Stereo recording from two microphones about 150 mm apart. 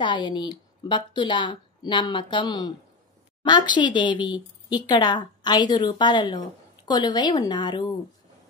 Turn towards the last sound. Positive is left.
turn(degrees=30)  # may be behind; listen again after turning